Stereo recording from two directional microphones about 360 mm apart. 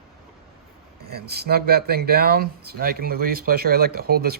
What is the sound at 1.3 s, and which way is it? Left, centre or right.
Speech, right.